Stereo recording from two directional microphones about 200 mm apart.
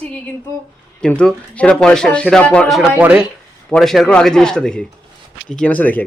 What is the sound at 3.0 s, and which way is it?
Speech, 10° right (ahead or behind).